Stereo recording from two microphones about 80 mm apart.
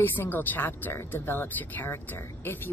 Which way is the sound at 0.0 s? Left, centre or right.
Left.